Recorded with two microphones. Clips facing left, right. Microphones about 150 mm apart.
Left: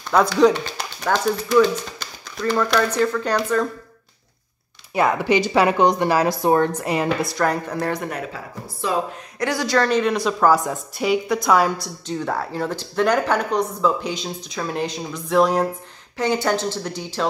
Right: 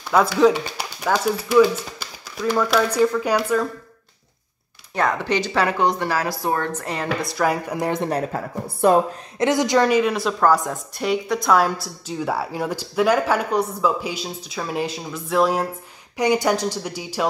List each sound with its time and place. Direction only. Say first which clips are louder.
0.1 s speech: even; 5° right (ahead or behind)
4.9 s speech: left 3 dB; 10° left (ahead or behind)
7.2 s speech: even; 5° right (ahead or behind)
8.0 s speech: right 5 dB; 35° right (ahead or behind)
8.8 s a woman's voice: right 8 dB; 55° right (ahead or behind)
9.4 s a woman's voice: right 3 dB; 20° right (ahead or behind); by 15.7 s 5° right (ahead or behind)
16.2 s speech: right 2 dB; 15° right (ahead or behind)